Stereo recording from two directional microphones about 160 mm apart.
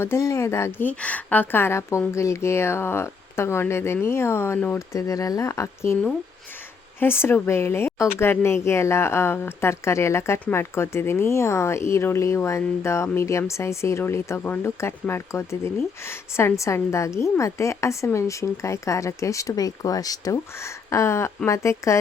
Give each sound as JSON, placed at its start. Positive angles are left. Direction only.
{"t": 0.0, "sound": "speech", "side_deg": 15}